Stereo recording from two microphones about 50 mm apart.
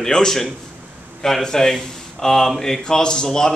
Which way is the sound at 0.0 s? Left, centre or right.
Centre.